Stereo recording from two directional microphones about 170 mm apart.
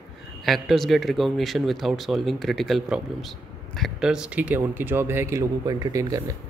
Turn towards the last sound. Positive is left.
turn(degrees=-20)  # may be behind; listen again after turning